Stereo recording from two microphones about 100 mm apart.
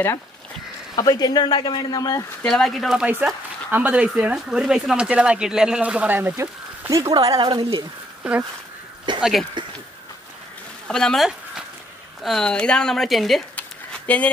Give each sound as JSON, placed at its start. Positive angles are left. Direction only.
{"t": 0.9, "sound": "speech", "side_deg": 40}
{"t": 2.4, "sound": "speech", "side_deg": 5}
{"t": 3.7, "sound": "speech", "side_deg": -15}
{"t": 6.9, "sound": "speech", "side_deg": -40}
{"t": 7.4, "sound": "speech", "side_deg": -55}
{"t": 8.2, "sound": "speech", "side_deg": -15}
{"t": 9.1, "sound": "a sound", "side_deg": -50}
{"t": 9.6, "sound": "speech", "side_deg": -50}
{"t": 10.9, "sound": "speech", "side_deg": 5}
{"t": 13.6, "sound": "a sound", "side_deg": 15}